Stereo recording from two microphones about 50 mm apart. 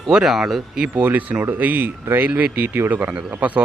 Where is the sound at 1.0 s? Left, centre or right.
Right.